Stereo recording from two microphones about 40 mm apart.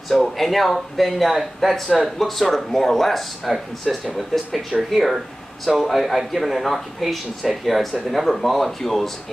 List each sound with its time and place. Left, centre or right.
0.1 s speech: centre